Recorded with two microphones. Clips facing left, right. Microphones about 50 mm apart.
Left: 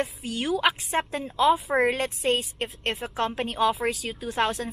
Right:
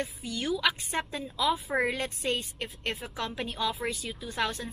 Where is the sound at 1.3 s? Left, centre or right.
Left.